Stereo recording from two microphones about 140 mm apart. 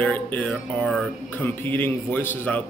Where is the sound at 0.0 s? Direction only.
10° left (ahead or behind).